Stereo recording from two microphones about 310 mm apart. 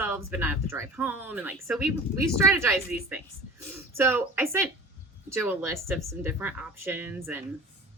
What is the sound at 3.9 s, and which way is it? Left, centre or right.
Speech, centre.